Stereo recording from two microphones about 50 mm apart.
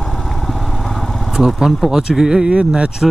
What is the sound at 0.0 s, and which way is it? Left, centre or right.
Vehicle, centre.